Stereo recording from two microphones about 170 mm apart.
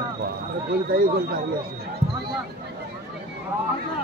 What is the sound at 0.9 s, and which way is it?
Speech, 60° right (ahead or behind).